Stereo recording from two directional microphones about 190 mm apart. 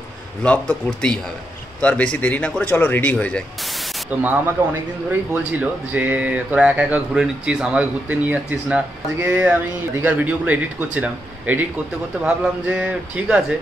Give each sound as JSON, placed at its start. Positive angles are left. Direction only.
{"t": 0.4, "sound": "speech", "side_deg": 5}
{"t": 5.5, "sound": "speech", "side_deg": -10}